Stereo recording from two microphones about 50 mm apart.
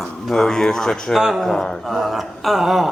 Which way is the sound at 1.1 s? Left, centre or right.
Centre.